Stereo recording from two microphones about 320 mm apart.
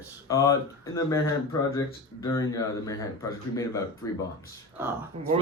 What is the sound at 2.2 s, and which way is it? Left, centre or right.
Speech, centre.